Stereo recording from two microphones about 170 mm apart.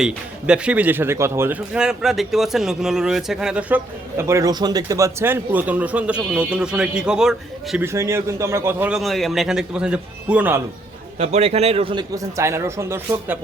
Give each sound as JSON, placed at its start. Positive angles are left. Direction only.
{"t": 0.0, "sound": "speech", "side_deg": -5}
{"t": 7.9, "sound": "speech", "side_deg": -15}
{"t": 9.0, "sound": "speech", "side_deg": 0}
{"t": 11.2, "sound": "a man's voice", "side_deg": -35}
{"t": 12.1, "sound": "speech", "side_deg": -15}